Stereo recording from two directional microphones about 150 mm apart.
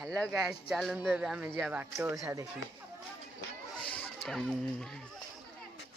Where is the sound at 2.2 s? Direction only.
20° right (ahead or behind).